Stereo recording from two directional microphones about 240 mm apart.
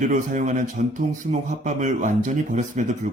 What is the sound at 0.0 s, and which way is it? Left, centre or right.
A man's voice, right.